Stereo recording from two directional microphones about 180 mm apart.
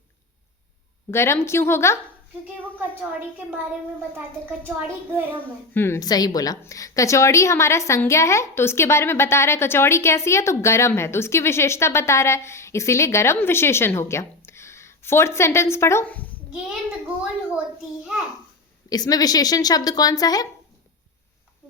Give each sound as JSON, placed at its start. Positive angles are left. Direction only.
{"t": 1.1, "sound": "a woman's voice", "side_deg": 15}
{"t": 2.9, "sound": "a child's voice", "side_deg": -10}
{"t": 4.6, "sound": "a child's voice", "side_deg": -10}
{"t": 5.7, "sound": "a woman's voice", "side_deg": 15}
{"t": 18.9, "sound": "speech", "side_deg": 20}